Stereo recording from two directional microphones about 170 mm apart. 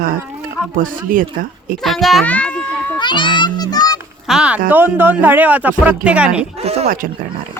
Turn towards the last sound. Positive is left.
turn(degrees=-35)  # may be behind; listen again after turning